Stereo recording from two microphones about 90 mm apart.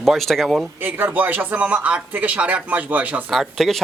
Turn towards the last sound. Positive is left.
turn(degrees=0)  # may be behind; listen again after turning